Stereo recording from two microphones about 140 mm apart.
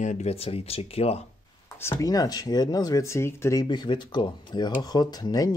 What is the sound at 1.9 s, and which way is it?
Speech, 25° left (ahead or behind).